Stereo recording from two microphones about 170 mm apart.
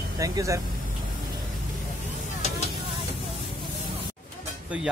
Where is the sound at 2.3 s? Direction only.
40° left (ahead or behind).